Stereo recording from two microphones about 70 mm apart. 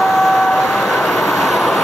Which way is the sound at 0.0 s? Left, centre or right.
Centre.